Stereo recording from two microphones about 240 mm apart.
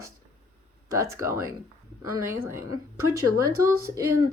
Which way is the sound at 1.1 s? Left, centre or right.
Centre.